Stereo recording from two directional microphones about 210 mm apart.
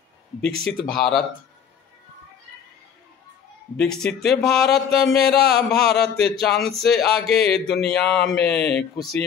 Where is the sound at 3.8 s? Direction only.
5° left (ahead or behind).